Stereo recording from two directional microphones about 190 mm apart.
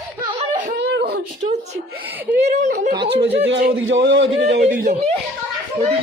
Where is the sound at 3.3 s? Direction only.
70° right (ahead or behind).